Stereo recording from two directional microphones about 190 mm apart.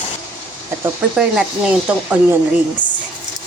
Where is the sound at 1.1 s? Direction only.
5° right (ahead or behind).